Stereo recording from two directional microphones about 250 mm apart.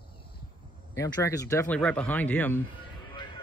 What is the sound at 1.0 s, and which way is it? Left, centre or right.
Speech, centre.